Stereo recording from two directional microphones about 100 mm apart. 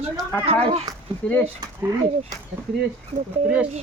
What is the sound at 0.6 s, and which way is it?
Speech, 90° right.